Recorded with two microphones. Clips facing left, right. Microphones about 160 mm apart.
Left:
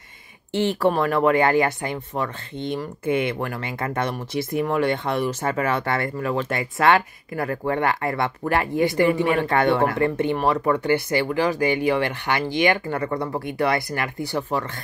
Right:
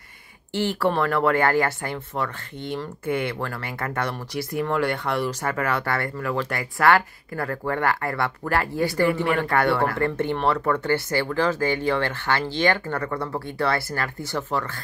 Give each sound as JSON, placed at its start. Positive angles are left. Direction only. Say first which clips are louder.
{"t": 0.6, "sound": "speech", "louder": "left 2 dB", "side_deg": 20}